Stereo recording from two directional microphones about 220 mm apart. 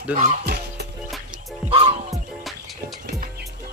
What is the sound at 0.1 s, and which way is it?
Speech, 35° right (ahead or behind).